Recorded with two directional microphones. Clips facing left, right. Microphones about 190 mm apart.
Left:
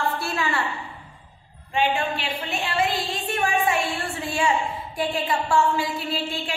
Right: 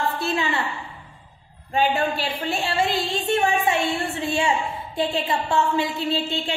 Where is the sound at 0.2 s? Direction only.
20° right (ahead or behind).